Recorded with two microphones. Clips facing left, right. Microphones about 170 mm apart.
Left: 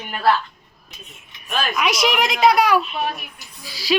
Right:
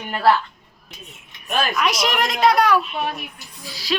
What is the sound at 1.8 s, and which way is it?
A woman's voice, centre (ahead or behind).